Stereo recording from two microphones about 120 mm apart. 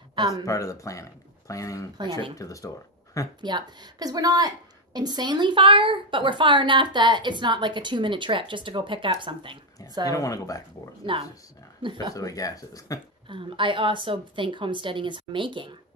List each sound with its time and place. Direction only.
0.1 s speech: 30° right (ahead or behind)
0.5 s speech: 25° left (ahead or behind)
3.3 s a woman's voice: 40° right (ahead or behind)
10.0 s speech: 30° left (ahead or behind)
11.1 s a woman's voice: 45° right (ahead or behind)
12.1 s speech: 30° left (ahead or behind)
13.3 s a woman's voice: 45° right (ahead or behind)